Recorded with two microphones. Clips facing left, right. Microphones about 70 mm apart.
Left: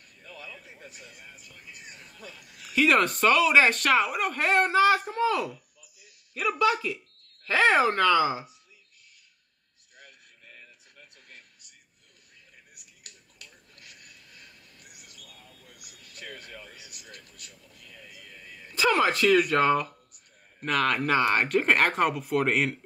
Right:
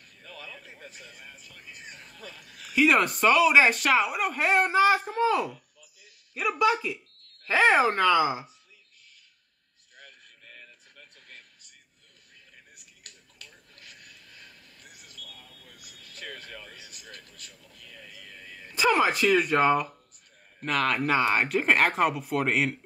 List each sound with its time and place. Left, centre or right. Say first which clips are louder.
0.4 s a sound: even; right
1.7 s speech: right 2 dB; right
2.7 s speech: even; centre
6.6 s speech: right 1 dB; centre
16.2 s a sound: right 1 dB; right
18.8 s speech: even; centre